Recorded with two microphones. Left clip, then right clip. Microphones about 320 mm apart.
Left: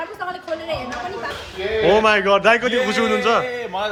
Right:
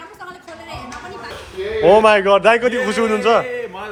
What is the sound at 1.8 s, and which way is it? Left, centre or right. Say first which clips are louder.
A man's voice: right 4 dB; centre.